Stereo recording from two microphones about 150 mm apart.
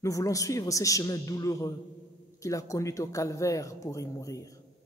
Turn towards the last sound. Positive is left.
turn(degrees=20)  # may be behind; listen again after turning